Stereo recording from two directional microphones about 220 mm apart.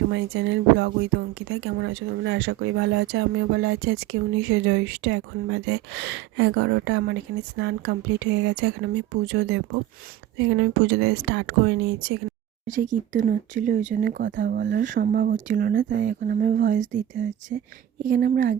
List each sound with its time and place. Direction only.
0.1 s speech: 55° right (ahead or behind)
12.6 s speech: 35° right (ahead or behind)
17.5 s speech: 45° right (ahead or behind)